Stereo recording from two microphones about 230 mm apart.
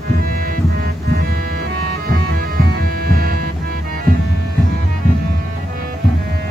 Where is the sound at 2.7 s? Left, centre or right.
Right.